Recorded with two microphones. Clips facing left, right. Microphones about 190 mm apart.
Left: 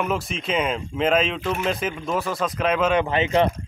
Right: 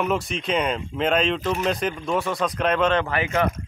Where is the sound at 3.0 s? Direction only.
20° left (ahead or behind).